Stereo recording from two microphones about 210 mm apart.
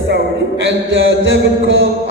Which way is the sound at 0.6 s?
60° right (ahead or behind).